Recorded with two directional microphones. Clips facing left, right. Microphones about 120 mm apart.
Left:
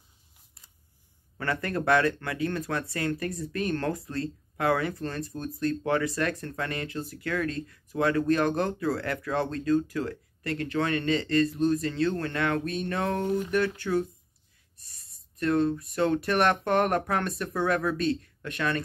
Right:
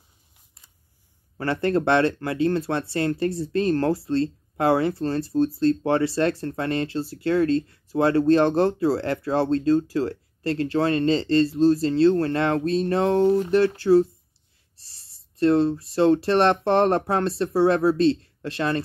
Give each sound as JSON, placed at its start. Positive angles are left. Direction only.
{"t": 1.4, "sound": "speech", "side_deg": -30}